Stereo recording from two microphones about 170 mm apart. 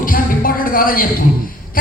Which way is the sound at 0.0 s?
55° left (ahead or behind).